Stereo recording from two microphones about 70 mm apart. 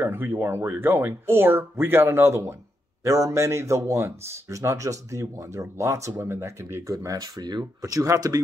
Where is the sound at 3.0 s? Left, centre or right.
Right.